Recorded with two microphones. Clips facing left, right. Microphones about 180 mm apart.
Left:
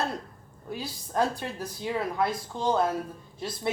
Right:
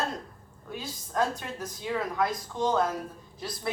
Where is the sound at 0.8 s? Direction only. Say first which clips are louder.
Left 1 dB; 30° left (ahead or behind).